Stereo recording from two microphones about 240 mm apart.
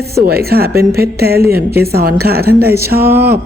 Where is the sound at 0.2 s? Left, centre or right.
Right.